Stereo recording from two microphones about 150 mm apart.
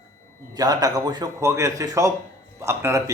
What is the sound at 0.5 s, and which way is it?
A man's voice, 25° right (ahead or behind).